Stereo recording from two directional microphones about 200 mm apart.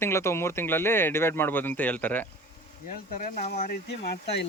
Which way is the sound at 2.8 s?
45° left (ahead or behind).